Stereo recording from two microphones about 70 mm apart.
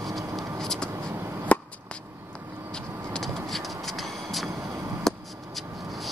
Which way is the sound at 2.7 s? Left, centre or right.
Centre.